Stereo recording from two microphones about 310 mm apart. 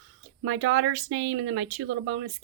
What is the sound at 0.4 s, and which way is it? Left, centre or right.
Speech, right.